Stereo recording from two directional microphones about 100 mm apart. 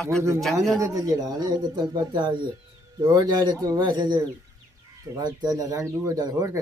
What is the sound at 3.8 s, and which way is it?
Speech, 50° right (ahead or behind).